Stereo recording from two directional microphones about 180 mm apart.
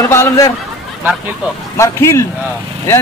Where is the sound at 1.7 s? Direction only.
15° left (ahead or behind).